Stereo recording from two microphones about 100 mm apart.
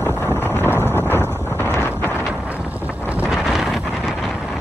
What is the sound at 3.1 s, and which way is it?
Wind noise, 10° right (ahead or behind).